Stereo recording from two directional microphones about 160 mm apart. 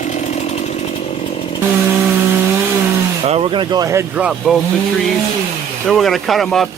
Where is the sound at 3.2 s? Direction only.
40° right (ahead or behind); by 4.6 s 5° right (ahead or behind).